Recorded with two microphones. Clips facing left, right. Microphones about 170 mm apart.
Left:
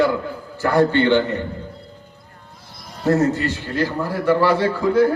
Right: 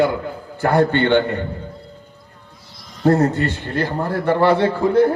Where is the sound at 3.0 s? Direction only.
55° right (ahead or behind).